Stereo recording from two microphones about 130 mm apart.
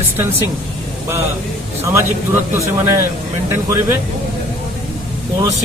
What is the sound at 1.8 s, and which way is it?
Speech, 20° right (ahead or behind).